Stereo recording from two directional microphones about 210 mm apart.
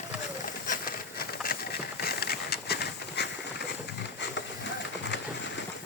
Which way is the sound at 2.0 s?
50° left (ahead or behind).